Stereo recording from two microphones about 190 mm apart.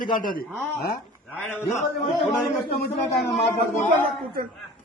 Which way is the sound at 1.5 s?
5° right (ahead or behind).